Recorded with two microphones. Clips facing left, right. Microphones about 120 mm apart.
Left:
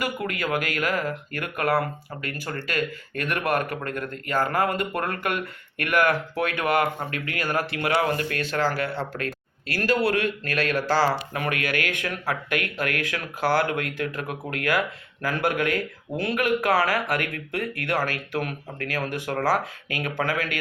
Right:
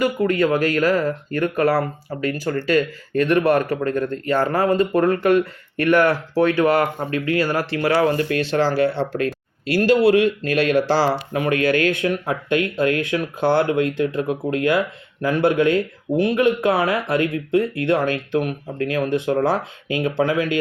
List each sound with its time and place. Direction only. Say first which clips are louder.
0.0 s speech: right 10 dB; 30° right (ahead or behind)